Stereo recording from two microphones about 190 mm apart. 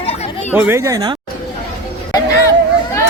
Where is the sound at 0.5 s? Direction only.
10° right (ahead or behind).